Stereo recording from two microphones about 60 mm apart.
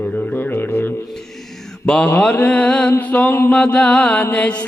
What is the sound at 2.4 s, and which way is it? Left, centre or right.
Music, left.